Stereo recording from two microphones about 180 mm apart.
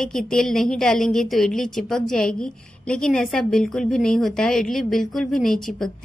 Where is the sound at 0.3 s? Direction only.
Centre (ahead or behind).